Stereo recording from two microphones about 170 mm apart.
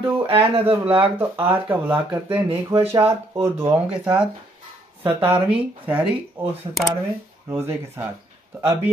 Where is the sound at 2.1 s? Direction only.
30° right (ahead or behind).